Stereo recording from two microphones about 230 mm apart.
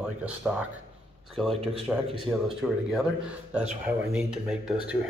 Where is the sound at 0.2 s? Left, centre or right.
Centre.